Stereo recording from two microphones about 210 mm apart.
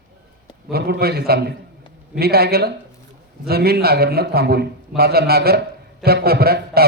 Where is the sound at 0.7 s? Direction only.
50° right (ahead or behind).